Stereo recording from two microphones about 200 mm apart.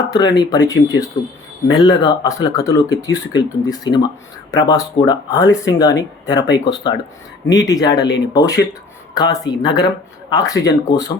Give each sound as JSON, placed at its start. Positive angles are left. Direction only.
{"t": 0.0, "sound": "speech", "side_deg": 20}